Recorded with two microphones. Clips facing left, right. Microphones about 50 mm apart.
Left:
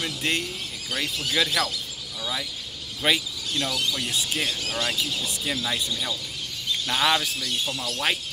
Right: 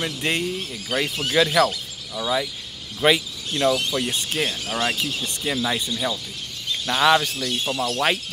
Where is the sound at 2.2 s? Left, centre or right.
Right.